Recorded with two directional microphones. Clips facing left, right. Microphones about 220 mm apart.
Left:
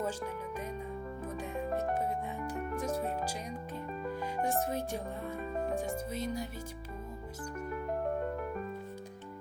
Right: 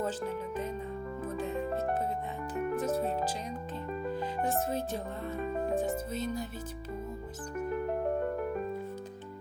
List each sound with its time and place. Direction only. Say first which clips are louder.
1.4 s music: right 2 dB; 15° left (ahead or behind)
3.0 s music: right 3 dB; 30° right (ahead or behind)
4.4 s speech: right 1 dB; 15° left (ahead or behind)